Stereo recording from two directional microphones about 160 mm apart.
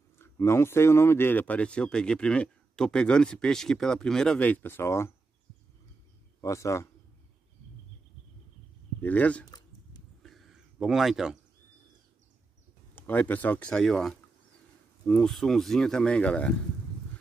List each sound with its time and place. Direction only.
0.2 s speech: 15° left (ahead or behind)
6.4 s a man's voice: 20° left (ahead or behind)
9.0 s speech: 10° left (ahead or behind)
10.2 s a sound: centre (ahead or behind)
12.9 s speech: 10° left (ahead or behind)